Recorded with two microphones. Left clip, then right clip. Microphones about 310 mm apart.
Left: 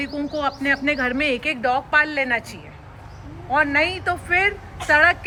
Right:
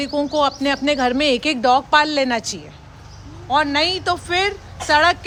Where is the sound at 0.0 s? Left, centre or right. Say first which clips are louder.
Right 6 dB; centre.